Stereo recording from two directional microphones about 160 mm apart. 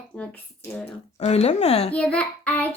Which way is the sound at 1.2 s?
45° left (ahead or behind).